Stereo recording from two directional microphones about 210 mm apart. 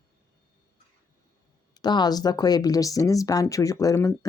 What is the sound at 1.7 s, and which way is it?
Speech, 20° left (ahead or behind).